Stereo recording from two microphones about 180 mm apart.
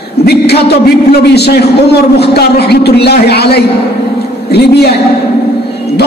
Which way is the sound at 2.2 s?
65° left (ahead or behind).